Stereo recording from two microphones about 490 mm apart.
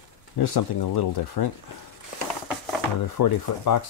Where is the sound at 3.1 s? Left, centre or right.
Left.